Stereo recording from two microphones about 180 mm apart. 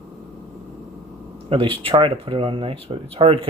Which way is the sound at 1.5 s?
30° right (ahead or behind).